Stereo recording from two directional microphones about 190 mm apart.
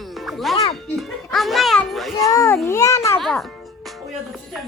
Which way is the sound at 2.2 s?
15° left (ahead or behind).